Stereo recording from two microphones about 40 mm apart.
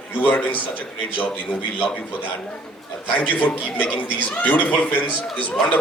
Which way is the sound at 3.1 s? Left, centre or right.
Left.